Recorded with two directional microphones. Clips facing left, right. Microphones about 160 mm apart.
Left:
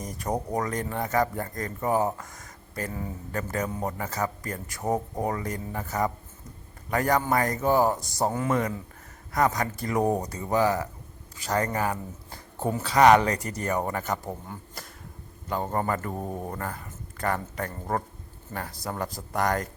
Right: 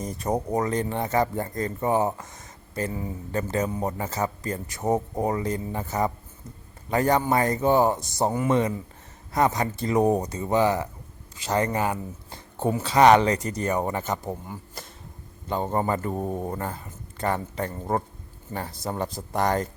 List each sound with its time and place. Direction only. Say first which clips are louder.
0.0 s speech: right 3 dB; 25° right (ahead or behind)
14.8 s a sound: right 2 dB; 20° right (ahead or behind)
15.4 s speech: right 2 dB; 25° right (ahead or behind)